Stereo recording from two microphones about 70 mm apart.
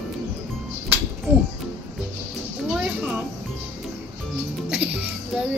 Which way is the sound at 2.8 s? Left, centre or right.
Centre.